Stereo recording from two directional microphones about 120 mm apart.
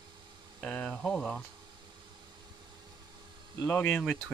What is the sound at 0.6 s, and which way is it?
Speech, 10° left (ahead or behind).